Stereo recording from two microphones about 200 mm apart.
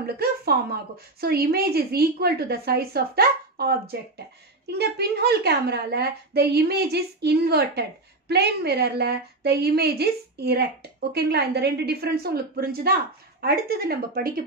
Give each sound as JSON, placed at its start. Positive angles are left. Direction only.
{"t": 0.0, "sound": "a woman's voice", "side_deg": -50}